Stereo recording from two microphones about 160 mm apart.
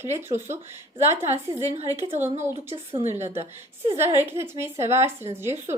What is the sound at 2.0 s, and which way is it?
Speech, 45° right (ahead or behind).